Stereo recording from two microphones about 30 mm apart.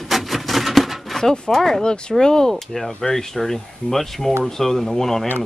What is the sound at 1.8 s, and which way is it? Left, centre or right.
Speech, left.